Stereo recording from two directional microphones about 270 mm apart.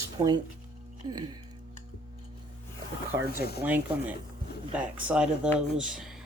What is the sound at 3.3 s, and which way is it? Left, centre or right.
Speech, left.